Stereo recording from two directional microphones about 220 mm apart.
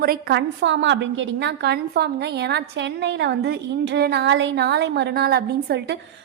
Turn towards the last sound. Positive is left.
turn(degrees=-45)  # may be behind; listen again after turning